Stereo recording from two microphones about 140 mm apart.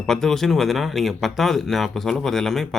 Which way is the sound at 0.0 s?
5° left (ahead or behind).